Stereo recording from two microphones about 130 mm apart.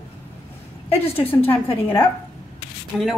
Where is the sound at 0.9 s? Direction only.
15° left (ahead or behind).